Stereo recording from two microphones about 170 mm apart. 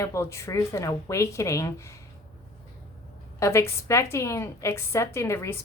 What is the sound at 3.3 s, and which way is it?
A woman's voice, 15° left (ahead or behind).